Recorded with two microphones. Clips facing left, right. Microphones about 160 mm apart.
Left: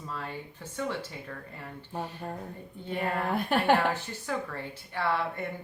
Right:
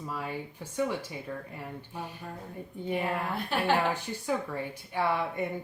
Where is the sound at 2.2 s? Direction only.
40° left (ahead or behind).